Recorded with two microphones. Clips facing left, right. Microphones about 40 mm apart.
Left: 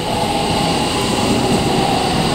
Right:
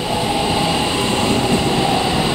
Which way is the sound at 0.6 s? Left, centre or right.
Right.